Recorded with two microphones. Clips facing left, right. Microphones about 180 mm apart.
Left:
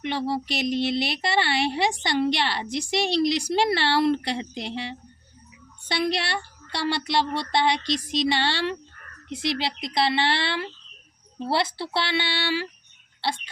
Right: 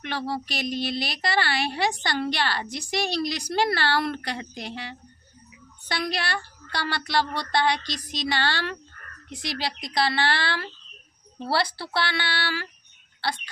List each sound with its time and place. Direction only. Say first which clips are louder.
0.0 s speech: left 3 dB; 20° left (ahead or behind)